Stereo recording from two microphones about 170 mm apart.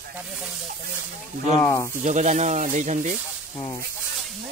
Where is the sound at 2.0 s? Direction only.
45° right (ahead or behind).